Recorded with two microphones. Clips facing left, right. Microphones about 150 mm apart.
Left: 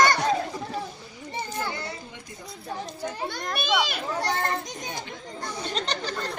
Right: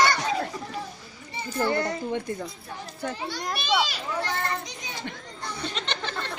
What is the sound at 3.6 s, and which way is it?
A child's voice, 50° left (ahead or behind).